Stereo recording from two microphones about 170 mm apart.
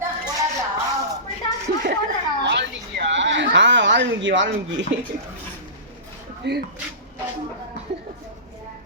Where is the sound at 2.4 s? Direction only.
90° right.